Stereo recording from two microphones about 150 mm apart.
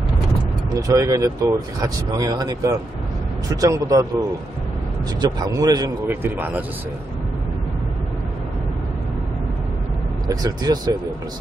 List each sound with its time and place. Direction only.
0.7 s speech: 25° right (ahead or behind)
6.0 s speech: 10° right (ahead or behind)
10.2 s speech: 25° right (ahead or behind)